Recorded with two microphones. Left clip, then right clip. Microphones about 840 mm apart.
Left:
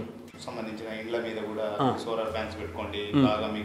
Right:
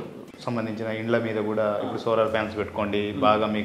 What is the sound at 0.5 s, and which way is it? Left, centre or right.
A man's voice, right.